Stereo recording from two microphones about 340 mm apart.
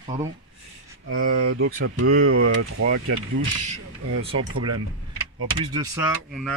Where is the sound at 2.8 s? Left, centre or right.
Right.